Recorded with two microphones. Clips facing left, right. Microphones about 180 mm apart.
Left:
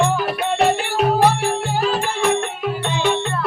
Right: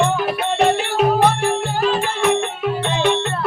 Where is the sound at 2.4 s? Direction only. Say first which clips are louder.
Right 2 dB; centre (ahead or behind).